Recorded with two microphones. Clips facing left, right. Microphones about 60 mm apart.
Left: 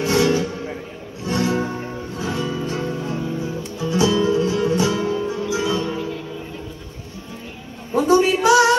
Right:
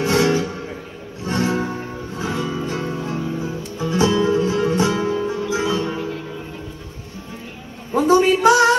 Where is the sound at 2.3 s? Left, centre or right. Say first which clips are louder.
Even; centre.